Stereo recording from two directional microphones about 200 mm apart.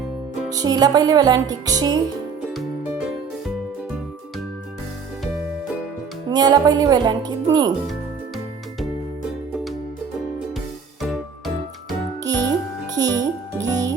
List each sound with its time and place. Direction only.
0.5 s music: 20° right (ahead or behind)
6.3 s music: 20° right (ahead or behind)
11.0 s music: centre (ahead or behind)
12.2 s music: 20° right (ahead or behind)